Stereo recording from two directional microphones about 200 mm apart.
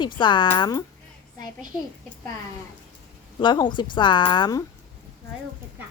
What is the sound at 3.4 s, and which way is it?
Speech, 25° left (ahead or behind).